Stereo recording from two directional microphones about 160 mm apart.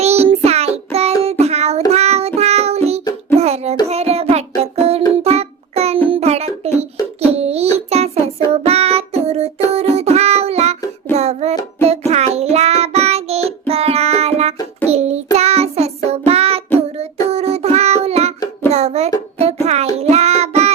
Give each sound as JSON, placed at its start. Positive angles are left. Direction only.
{"t": 0.0, "sound": "child singing", "side_deg": -40}
{"t": 3.0, "sound": "music", "side_deg": 25}
{"t": 3.3, "sound": "child singing", "side_deg": -40}
{"t": 5.1, "sound": "music", "side_deg": -40}
{"t": 7.3, "sound": "a sound", "side_deg": -40}
{"t": 7.9, "sound": "child singing", "side_deg": -40}
{"t": 9.7, "sound": "music", "side_deg": -40}
{"t": 14.8, "sound": "child singing", "side_deg": -40}
{"t": 18.7, "sound": "a sound", "side_deg": -40}
{"t": 19.6, "sound": "child singing", "side_deg": -40}